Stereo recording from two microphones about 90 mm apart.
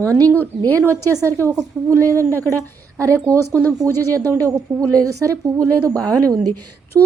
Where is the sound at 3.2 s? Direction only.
30° right (ahead or behind).